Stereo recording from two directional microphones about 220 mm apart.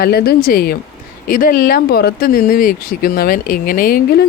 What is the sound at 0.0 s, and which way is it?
Speech, 45° left (ahead or behind).